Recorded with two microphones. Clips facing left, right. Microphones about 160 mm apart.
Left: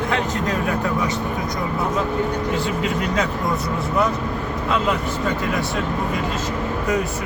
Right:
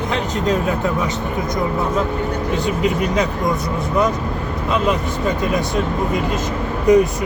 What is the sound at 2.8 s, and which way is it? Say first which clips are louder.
Speech: right 6 dB; 15° right (ahead or behind).